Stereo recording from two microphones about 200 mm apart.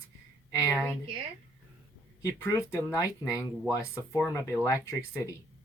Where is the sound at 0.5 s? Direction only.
15° left (ahead or behind).